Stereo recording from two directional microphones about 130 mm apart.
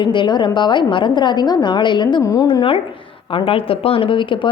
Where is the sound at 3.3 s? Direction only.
45° left (ahead or behind).